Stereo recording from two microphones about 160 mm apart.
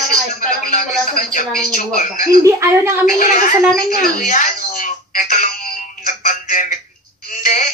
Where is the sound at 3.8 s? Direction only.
60° left (ahead or behind).